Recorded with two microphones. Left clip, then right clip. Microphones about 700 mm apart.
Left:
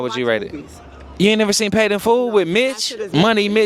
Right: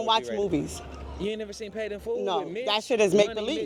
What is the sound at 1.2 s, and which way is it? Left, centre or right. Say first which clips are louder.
Speech: left 17 dB; left.